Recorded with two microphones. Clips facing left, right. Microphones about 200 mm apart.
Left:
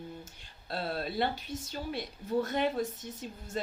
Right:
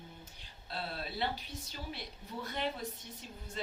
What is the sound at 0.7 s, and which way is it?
Speech, 45° left (ahead or behind).